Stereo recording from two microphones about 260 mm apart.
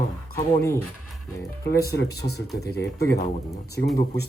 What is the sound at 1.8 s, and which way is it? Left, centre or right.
Speech, left.